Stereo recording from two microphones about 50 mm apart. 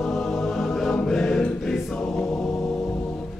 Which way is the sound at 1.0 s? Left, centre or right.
Centre.